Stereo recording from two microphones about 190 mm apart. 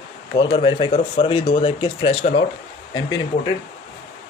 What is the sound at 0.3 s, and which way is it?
Speech, 25° left (ahead or behind).